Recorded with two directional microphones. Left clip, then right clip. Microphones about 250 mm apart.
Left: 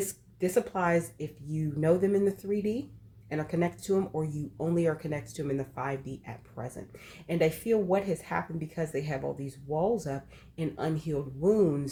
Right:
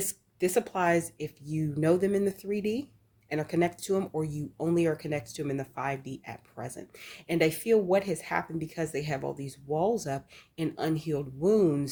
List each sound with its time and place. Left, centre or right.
0.1 s speech: right